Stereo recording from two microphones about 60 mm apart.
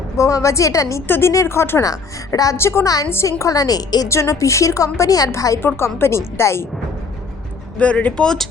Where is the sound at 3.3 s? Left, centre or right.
Left.